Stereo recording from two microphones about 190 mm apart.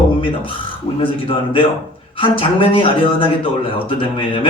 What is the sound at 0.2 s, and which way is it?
Speech, 25° left (ahead or behind).